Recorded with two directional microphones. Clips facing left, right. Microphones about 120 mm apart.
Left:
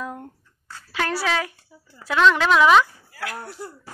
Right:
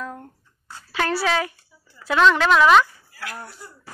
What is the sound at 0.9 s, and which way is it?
Speech, centre (ahead or behind).